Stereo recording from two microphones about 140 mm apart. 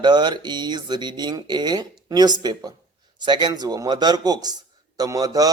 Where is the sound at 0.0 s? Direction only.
30° right (ahead or behind).